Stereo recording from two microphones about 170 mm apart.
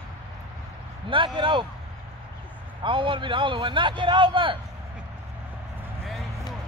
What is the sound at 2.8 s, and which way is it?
A man's voice, 30° right (ahead or behind).